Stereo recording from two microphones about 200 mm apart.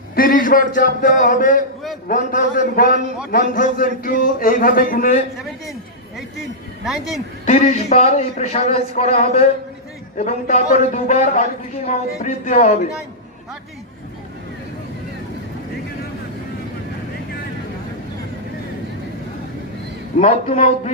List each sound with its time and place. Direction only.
0.2 s a man's voice: 45° left (ahead or behind)
6.8 s speech: centre (ahead or behind)
7.4 s a man's voice: 35° left (ahead or behind)
20.1 s a man's voice: 35° left (ahead or behind)